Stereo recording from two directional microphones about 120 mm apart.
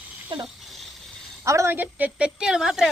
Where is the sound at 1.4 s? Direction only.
25° right (ahead or behind).